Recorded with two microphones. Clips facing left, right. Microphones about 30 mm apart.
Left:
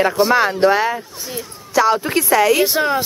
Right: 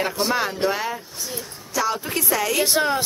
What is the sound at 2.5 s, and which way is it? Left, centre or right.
Speech, centre.